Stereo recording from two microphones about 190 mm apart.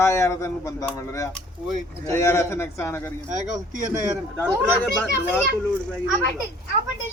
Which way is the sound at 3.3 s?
40° right (ahead or behind).